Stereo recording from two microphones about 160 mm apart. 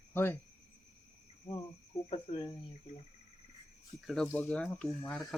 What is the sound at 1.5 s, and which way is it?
Speech, 30° left (ahead or behind).